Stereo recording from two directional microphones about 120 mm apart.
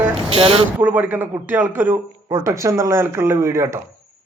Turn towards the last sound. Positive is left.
turn(degrees=-25)  # may be behind; listen again after turning